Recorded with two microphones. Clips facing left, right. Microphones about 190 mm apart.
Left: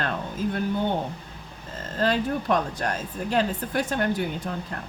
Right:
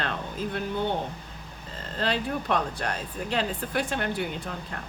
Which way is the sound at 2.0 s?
45° left (ahead or behind).